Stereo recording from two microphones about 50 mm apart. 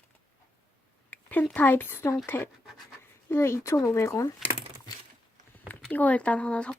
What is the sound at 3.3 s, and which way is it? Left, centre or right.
Speech, left.